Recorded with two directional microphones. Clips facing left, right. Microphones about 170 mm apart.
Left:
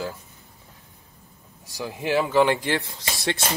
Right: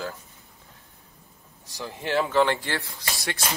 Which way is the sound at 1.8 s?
10° left (ahead or behind).